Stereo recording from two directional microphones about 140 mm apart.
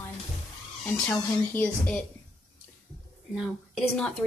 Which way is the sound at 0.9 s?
10° left (ahead or behind).